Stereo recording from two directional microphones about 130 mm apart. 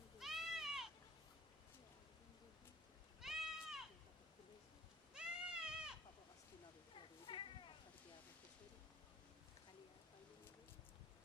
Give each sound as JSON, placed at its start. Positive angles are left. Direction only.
{"t": 0.2, "sound": "goat", "side_deg": 0}
{"t": 3.2, "sound": "goat", "side_deg": -5}
{"t": 5.1, "sound": "goat", "side_deg": -5}
{"t": 6.9, "sound": "cat", "side_deg": 40}